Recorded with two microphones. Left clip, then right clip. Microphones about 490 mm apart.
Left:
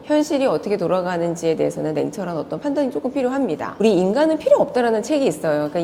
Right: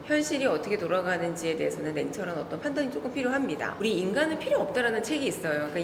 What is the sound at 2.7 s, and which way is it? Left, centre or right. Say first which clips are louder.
Speech: left 11 dB; left.